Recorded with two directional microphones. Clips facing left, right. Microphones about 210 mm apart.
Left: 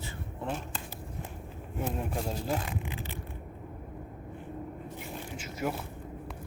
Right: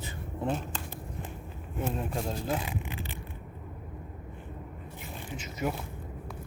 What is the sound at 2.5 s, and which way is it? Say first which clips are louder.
Speech: even; 10° right (ahead or behind).